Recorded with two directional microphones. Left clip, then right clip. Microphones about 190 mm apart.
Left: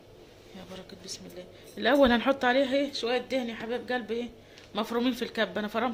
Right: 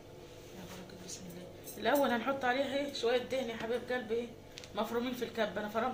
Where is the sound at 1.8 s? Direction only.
60° left (ahead or behind).